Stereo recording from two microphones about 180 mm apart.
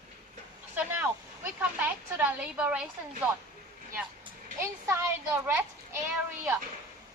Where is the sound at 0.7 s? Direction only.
10° right (ahead or behind).